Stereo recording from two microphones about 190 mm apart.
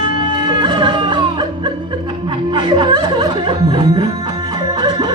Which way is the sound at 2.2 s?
25° right (ahead or behind).